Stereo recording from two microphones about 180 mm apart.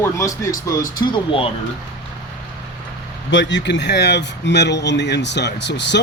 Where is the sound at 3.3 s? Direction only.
90° left.